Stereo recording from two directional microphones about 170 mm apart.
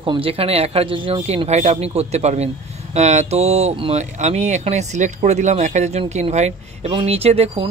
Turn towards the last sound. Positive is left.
turn(degrees=-35)  # may be behind; listen again after turning